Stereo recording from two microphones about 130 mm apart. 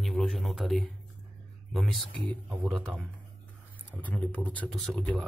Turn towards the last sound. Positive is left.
turn(degrees=10)  # may be behind; listen again after turning